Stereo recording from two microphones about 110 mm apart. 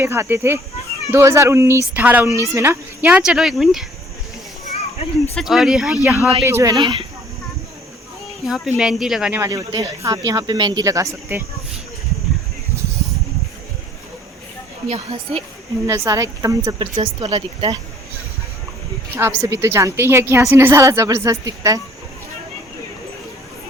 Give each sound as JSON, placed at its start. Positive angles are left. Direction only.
{"t": 0.0, "sound": "a woman's voice", "side_deg": -25}
{"t": 3.1, "sound": "speech", "side_deg": -5}
{"t": 4.7, "sound": "children playing", "side_deg": 75}
{"t": 5.3, "sound": "speech", "side_deg": 0}
{"t": 6.0, "sound": "speech", "side_deg": -15}
{"t": 6.4, "sound": "speech", "side_deg": -25}
{"t": 8.4, "sound": "speech", "side_deg": 0}
{"t": 9.5, "sound": "speech", "side_deg": -30}
{"t": 14.8, "sound": "a woman's voice", "side_deg": -65}
{"t": 15.9, "sound": "a woman's voice", "side_deg": -25}
{"t": 16.7, "sound": "speech", "side_deg": -50}
{"t": 19.4, "sound": "a woman's voice", "side_deg": -25}